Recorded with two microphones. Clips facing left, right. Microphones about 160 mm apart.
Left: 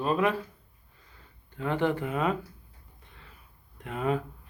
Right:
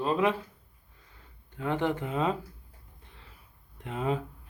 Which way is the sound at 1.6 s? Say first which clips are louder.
Left 2 dB; 15° right (ahead or behind).